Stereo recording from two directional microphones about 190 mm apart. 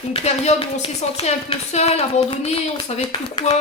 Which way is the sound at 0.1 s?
35° left (ahead or behind).